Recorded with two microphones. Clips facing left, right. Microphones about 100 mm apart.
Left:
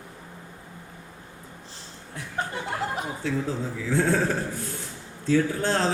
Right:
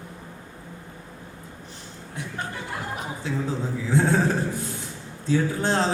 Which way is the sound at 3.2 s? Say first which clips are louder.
Left 2 dB; 20° right (ahead or behind).